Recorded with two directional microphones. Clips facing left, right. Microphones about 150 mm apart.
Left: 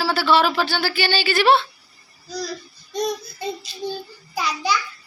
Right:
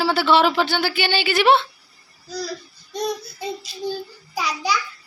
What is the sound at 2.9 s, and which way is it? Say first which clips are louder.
Child singing: left 1 dB; 5° right (ahead or behind).